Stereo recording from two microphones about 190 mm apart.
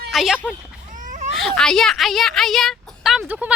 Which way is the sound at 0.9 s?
40° right (ahead or behind).